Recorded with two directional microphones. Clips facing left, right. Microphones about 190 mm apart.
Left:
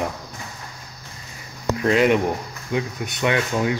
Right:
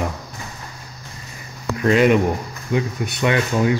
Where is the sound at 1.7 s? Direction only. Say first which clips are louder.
Right 2 dB; 20° left (ahead or behind).